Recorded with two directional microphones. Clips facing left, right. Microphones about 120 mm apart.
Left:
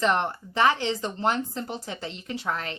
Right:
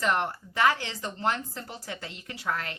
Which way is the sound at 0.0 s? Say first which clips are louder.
Left 3 dB; 25° left (ahead or behind).